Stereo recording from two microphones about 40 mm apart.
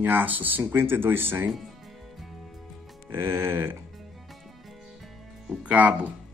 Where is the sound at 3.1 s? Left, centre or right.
Right.